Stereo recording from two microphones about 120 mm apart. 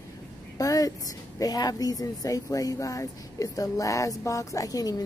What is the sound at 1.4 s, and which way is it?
A man's voice, 30° left (ahead or behind).